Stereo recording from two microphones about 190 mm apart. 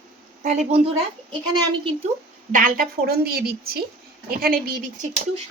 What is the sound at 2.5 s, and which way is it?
A woman's voice, 45° right (ahead or behind).